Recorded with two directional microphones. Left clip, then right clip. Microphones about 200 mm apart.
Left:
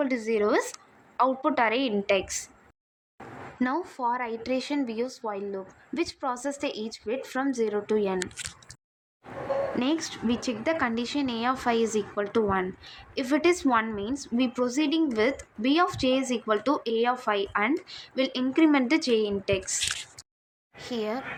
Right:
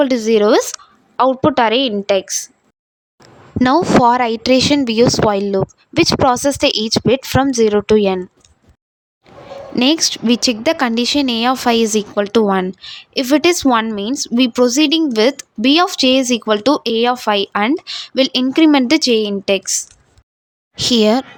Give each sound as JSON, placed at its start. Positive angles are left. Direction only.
{"t": 0.0, "sound": "a woman's voice", "side_deg": -50}
{"t": 3.6, "sound": "speech", "side_deg": -55}
{"t": 9.7, "sound": "speech", "side_deg": -55}
{"t": 20.8, "sound": "speech", "side_deg": -55}